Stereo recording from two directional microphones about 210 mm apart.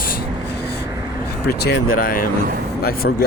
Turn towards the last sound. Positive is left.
turn(degrees=45)  # may be behind; listen again after turning